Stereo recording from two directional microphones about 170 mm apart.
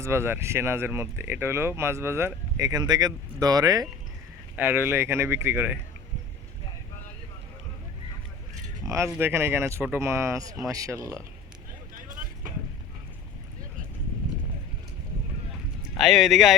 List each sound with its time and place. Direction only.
0.0 s speech: 15° right (ahead or behind)
4.5 s speech: 10° right (ahead or behind)
9.0 s speech: 10° right (ahead or behind)
15.8 s speech: centre (ahead or behind)